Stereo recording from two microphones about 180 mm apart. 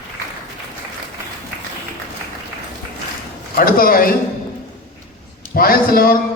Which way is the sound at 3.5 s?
55° left (ahead or behind).